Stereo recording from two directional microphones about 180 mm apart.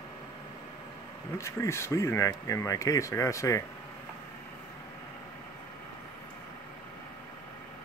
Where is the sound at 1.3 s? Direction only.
15° left (ahead or behind).